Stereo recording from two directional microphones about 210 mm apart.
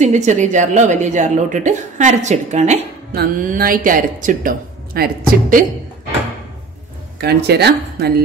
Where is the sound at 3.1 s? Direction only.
45° right (ahead or behind).